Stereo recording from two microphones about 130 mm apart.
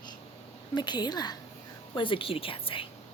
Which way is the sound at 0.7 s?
35° left (ahead or behind).